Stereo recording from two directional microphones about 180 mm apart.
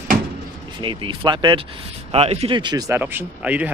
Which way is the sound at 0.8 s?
30° right (ahead or behind).